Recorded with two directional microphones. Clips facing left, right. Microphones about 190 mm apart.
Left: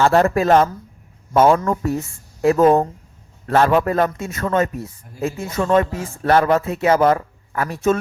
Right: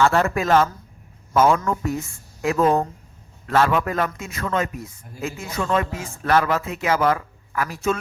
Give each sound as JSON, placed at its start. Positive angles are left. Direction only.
{"t": 0.0, "sound": "speech", "side_deg": 40}